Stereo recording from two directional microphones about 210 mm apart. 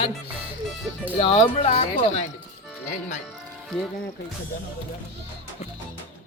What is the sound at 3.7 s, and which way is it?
Speech, 5° left (ahead or behind).